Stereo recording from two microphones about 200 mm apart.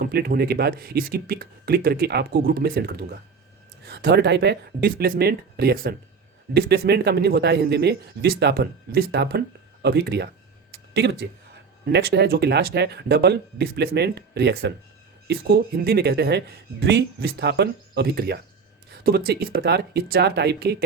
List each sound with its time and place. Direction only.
0.0 s a man's voice: 50° right (ahead or behind)
10.7 s a sound: 55° right (ahead or behind)
11.9 s a man's voice: 55° right (ahead or behind)